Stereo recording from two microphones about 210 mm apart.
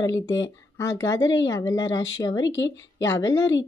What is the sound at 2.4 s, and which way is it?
Speech, 60° left (ahead or behind).